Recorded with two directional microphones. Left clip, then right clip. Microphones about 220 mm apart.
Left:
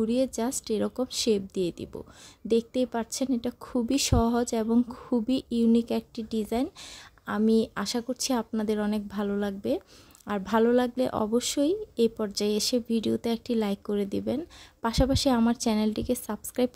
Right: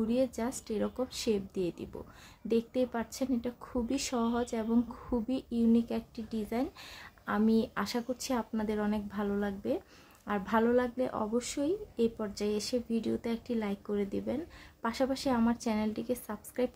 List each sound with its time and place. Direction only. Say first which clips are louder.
0.0 s speech: left 4 dB; 35° left (ahead or behind)